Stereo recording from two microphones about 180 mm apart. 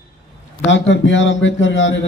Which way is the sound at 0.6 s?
90° left.